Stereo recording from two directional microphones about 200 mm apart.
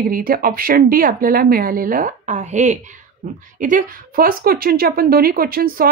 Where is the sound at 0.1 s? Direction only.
45° right (ahead or behind).